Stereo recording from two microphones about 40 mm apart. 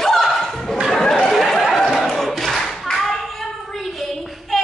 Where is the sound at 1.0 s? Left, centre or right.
Centre.